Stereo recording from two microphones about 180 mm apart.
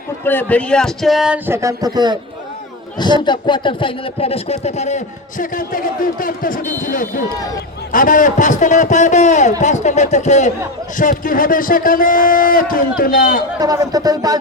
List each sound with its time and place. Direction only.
0.3 s a man's voice: 10° left (ahead or behind); by 2.1 s 20° right (ahead or behind)
3.0 s a sound: 25° left (ahead or behind); by 10.5 s 40° left (ahead or behind)
10.9 s a man's voice: 50° left (ahead or behind)
13.6 s speech: 20° right (ahead or behind)